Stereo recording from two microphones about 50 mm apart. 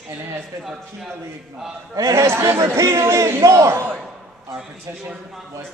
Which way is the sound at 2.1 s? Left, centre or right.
Right.